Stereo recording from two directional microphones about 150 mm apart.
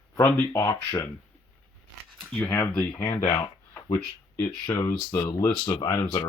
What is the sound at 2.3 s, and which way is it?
Speech, 10° left (ahead or behind).